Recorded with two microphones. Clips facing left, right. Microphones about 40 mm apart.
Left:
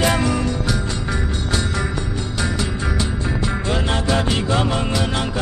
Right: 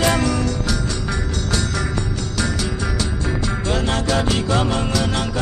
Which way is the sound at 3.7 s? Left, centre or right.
Centre.